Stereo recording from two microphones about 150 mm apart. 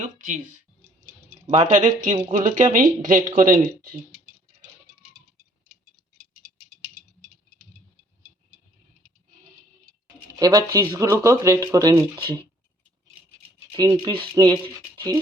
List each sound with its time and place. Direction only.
1.5 s speech: 50° right (ahead or behind)
10.3 s speech: 25° right (ahead or behind)
13.7 s speech: 25° right (ahead or behind)